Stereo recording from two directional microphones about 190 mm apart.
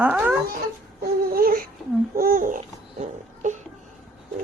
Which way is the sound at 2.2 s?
45° right (ahead or behind).